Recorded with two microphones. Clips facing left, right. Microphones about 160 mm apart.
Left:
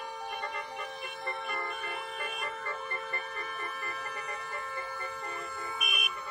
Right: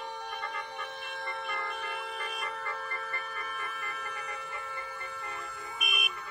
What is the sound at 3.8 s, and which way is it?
Music, 40° left (ahead or behind).